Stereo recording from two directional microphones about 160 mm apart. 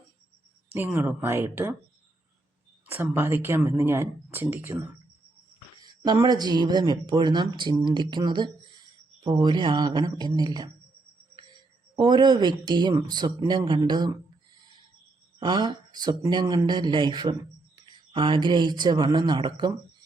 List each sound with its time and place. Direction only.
0.7 s speech: 10° right (ahead or behind)
2.8 s speech: 15° right (ahead or behind)
5.8 s speech: 25° right (ahead or behind)
11.9 s speech: 25° right (ahead or behind)
15.4 s speech: 30° right (ahead or behind)